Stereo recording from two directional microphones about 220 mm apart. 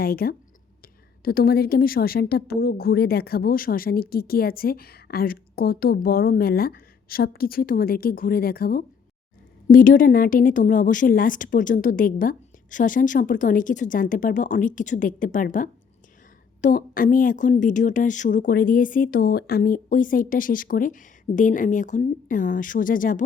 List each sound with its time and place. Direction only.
0.0 s a woman's voice: 45° left (ahead or behind)
16.6 s a woman's voice: 40° left (ahead or behind)